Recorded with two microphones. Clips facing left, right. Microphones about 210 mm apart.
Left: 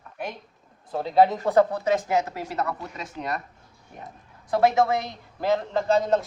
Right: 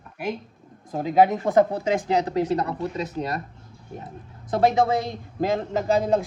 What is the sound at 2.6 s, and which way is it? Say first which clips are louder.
Speech: right 6 dB; 35° right (ahead or behind).